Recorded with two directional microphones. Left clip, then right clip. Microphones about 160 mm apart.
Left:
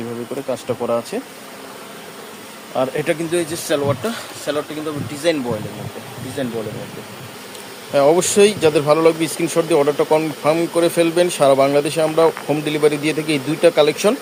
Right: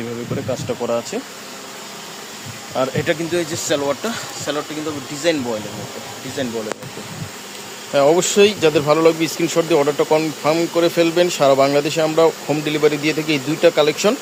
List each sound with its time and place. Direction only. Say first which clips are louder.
0.8 s speech: left 1 dB; centre (ahead or behind)
2.7 s speech: even; centre (ahead or behind)
7.9 s speech: even; centre (ahead or behind)